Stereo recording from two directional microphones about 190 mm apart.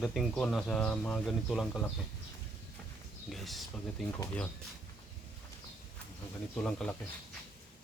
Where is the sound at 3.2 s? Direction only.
Centre (ahead or behind).